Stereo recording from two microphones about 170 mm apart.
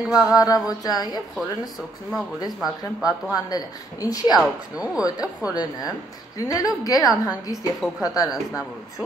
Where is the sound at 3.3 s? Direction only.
20° left (ahead or behind).